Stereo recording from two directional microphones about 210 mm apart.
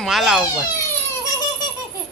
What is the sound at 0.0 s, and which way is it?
Speech, centre (ahead or behind).